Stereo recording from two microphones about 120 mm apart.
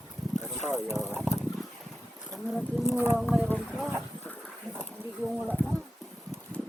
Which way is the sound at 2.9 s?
20° right (ahead or behind).